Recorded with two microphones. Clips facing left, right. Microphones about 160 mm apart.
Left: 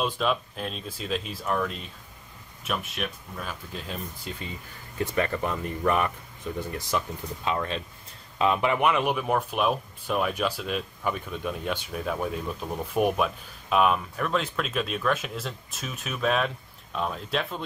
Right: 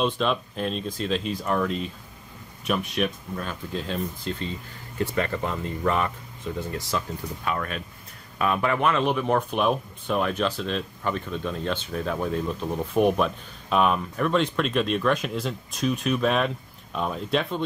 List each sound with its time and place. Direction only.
0.0 s speech: 5° left (ahead or behind)
5.3 s speech: 20° right (ahead or behind)
6.7 s speech: 20° left (ahead or behind); by 17.6 s centre (ahead or behind)